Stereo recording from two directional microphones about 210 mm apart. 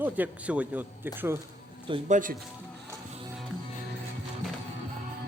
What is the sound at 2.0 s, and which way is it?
Speech, 35° right (ahead or behind).